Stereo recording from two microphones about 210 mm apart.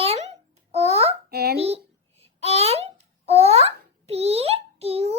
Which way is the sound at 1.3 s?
50° right (ahead or behind).